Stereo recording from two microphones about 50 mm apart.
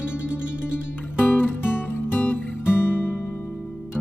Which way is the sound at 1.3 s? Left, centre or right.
Left.